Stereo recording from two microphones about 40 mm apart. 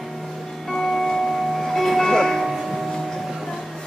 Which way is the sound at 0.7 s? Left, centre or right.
Centre.